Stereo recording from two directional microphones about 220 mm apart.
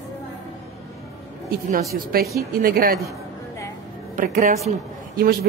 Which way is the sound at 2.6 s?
40° right (ahead or behind).